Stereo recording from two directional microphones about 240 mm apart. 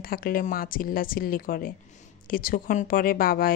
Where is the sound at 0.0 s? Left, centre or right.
Left.